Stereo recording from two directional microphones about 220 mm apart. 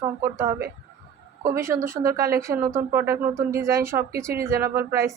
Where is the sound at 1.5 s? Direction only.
10° right (ahead or behind).